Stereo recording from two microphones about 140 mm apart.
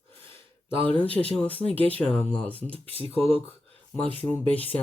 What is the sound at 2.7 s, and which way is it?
Speech, 40° right (ahead or behind).